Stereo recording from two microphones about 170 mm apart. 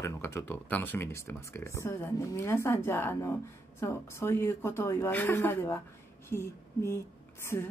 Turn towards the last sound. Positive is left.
turn(degrees=15)  # may be behind; listen again after turning